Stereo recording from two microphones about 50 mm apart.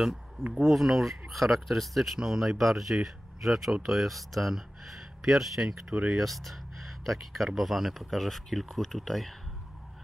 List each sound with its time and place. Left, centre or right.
0.7 s speech: centre
6.0 s speech: centre